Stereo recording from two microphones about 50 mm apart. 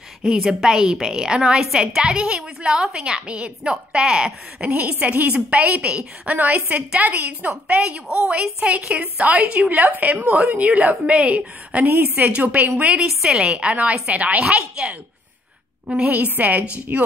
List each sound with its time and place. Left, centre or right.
0.5 s a woman's voice: centre
4.6 s a woman's voice: right
11.8 s a woman's voice: right
12.2 s a woman's voice: right
15.9 s a woman's voice: right